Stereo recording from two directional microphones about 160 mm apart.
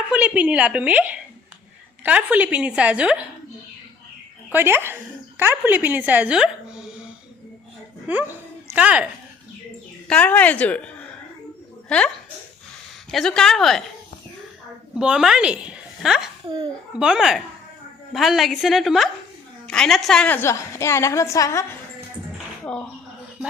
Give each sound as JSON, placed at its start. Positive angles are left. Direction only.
{"t": 0.1, "sound": "a woman's voice", "side_deg": -5}
{"t": 4.5, "sound": "a woman's voice", "side_deg": -15}
{"t": 8.0, "sound": "speech", "side_deg": -10}
{"t": 10.1, "sound": "a woman's voice", "side_deg": 10}
{"t": 14.9, "sound": "a woman's voice", "side_deg": -5}